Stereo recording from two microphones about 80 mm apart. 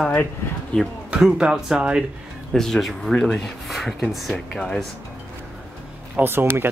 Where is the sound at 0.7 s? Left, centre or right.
Centre.